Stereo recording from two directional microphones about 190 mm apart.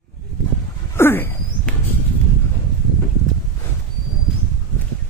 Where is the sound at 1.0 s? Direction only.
10° left (ahead or behind).